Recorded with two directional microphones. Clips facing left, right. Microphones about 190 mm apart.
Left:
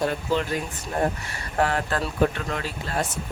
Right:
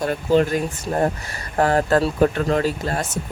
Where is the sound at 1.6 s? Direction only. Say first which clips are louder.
Right 7 dB; 40° right (ahead or behind).